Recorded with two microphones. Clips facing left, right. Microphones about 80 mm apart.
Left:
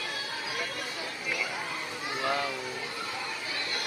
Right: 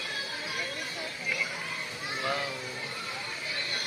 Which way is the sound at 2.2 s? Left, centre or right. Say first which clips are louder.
Left 2 dB; left.